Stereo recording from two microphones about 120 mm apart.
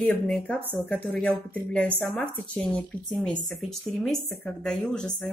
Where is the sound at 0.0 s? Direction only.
10° left (ahead or behind).